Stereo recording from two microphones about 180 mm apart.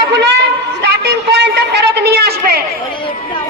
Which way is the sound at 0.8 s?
70° right (ahead or behind).